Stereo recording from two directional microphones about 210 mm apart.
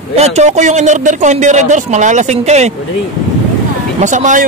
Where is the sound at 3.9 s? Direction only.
35° right (ahead or behind).